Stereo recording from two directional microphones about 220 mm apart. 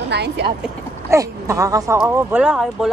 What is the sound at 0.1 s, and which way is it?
Speech, 50° right (ahead or behind).